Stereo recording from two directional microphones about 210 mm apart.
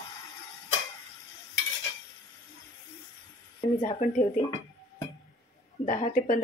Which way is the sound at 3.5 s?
35° left (ahead or behind).